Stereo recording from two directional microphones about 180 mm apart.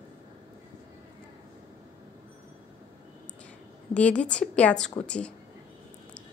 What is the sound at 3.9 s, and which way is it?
A woman's voice, 5° left (ahead or behind).